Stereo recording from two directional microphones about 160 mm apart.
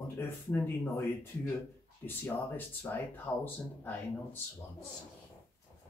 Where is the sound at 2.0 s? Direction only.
15° left (ahead or behind).